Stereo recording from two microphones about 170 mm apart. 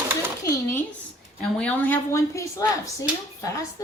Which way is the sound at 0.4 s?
15° left (ahead or behind).